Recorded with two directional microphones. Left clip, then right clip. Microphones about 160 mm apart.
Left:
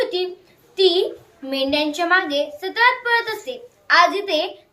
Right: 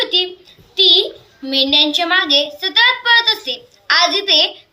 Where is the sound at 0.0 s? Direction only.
5° left (ahead or behind).